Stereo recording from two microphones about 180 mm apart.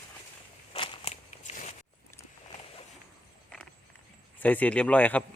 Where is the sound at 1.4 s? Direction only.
45° left (ahead or behind).